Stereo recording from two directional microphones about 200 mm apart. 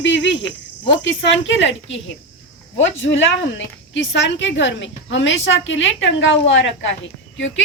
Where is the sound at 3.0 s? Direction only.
70° left (ahead or behind).